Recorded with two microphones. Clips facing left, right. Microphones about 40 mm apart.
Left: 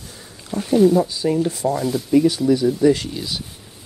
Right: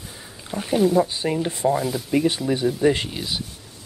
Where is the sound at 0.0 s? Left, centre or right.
Centre.